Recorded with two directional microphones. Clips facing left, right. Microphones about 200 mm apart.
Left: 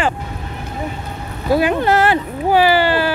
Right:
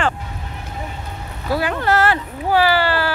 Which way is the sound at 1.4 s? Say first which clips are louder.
Left 5 dB; 15° left (ahead or behind).